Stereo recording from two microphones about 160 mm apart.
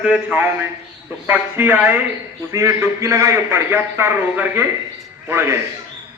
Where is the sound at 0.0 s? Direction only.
10° right (ahead or behind).